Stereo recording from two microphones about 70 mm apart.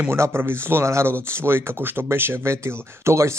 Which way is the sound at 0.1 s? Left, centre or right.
Right.